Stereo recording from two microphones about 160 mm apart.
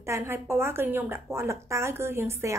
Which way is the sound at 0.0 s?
15° right (ahead or behind).